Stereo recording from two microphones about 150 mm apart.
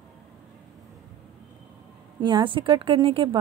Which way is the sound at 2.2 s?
30° right (ahead or behind).